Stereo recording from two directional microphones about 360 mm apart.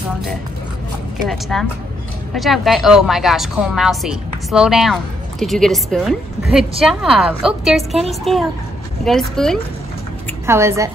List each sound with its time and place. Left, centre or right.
1.3 s a woman's voice: centre